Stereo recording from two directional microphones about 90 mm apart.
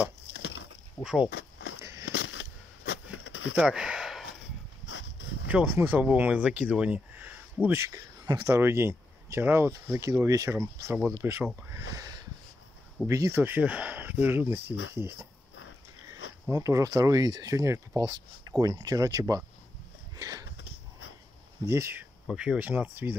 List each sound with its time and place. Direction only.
1.0 s speech: 10° right (ahead or behind)
1.8 s a sound: 30° right (ahead or behind)
3.5 s a sound: 10° right (ahead or behind)
5.5 s speech: 15° right (ahead or behind)
7.6 s speech: 30° right (ahead or behind)
13.1 s speech: 40° right (ahead or behind)
13.4 s speech: 20° right (ahead or behind)
16.4 s speech: 35° right (ahead or behind)
20.2 s sniff: 40° right (ahead or behind)
21.6 s speech: 30° right (ahead or behind)
22.3 s speech: 10° right (ahead or behind)